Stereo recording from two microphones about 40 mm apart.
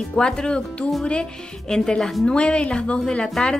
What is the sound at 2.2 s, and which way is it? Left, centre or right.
Speech, left.